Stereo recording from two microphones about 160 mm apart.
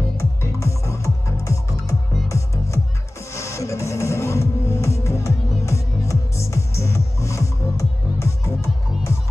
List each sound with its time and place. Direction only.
0.2 s music: 20° left (ahead or behind)